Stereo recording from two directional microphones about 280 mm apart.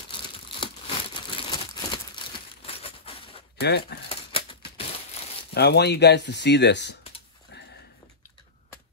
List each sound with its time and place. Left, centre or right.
0.1 s crumpling: centre
3.6 s speech: left
4.1 s a sound: centre
5.5 s speech: left